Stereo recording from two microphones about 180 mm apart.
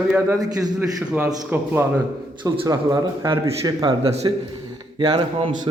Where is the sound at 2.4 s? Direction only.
20° right (ahead or behind).